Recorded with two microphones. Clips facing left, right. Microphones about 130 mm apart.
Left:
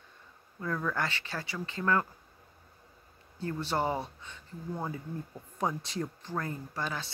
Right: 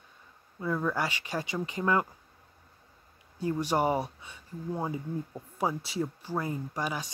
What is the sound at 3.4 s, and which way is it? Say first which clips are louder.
Speech: right 4 dB; 15° right (ahead or behind).